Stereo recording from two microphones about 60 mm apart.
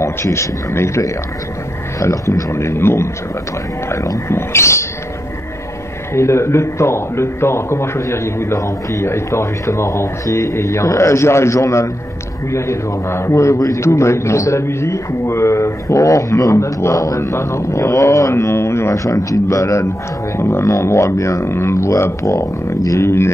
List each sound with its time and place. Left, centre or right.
0.0 s a man's voice: left
3.9 s a man's voice: left
6.1 s a man's voice: left
12.4 s a man's voice: left
18.3 s a man's voice: left
19.1 s speech: left
20.3 s a man's voice: left
23.0 s a man's voice: left